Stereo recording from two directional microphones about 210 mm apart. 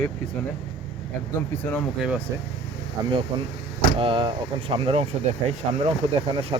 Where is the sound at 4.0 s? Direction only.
25° right (ahead or behind).